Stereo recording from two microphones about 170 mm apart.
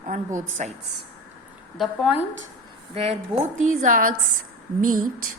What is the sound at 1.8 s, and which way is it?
Speech, 5° right (ahead or behind).